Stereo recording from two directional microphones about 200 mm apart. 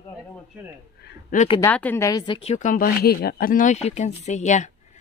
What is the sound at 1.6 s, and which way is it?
Speech, 10° left (ahead or behind).